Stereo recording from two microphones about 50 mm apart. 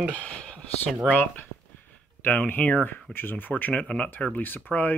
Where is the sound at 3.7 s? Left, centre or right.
Left.